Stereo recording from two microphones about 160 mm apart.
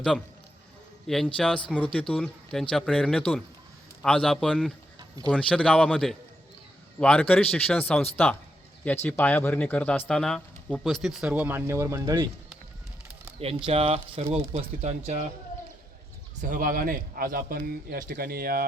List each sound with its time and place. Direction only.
1.0 s speech: centre (ahead or behind)
4.9 s a sound: 25° right (ahead or behind)
5.3 s speech: 5° left (ahead or behind); by 12.2 s 20° right (ahead or behind)
13.7 s speech: 40° right (ahead or behind)
16.4 s a man's voice: 60° right (ahead or behind)